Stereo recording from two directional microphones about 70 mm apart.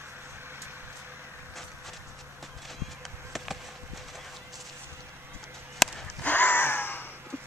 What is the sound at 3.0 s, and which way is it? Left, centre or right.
Insect, centre.